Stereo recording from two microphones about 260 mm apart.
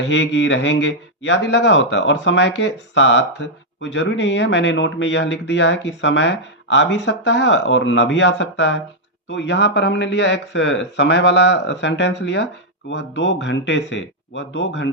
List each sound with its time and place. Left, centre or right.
0.0 s a man's voice: left